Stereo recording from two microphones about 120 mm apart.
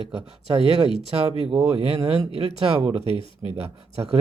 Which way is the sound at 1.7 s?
55° right (ahead or behind).